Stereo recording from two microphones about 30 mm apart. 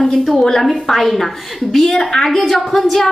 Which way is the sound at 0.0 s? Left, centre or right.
Centre.